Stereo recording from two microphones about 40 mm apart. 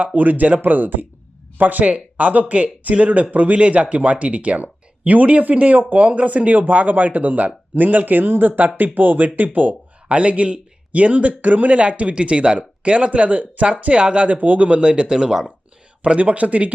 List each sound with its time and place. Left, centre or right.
0.0 s speech: right
11.8 s speech: right; by 15.4 s centre
16.0 s speech: right